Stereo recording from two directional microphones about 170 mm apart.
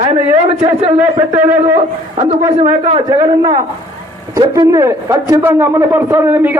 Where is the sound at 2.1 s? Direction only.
40° right (ahead or behind).